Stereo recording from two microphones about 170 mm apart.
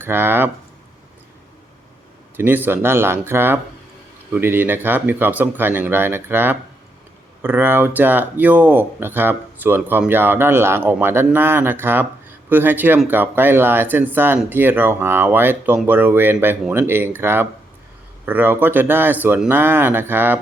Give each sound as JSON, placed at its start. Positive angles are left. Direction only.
{"t": 0.0, "sound": "speech", "side_deg": -10}
{"t": 2.3, "sound": "speech", "side_deg": -10}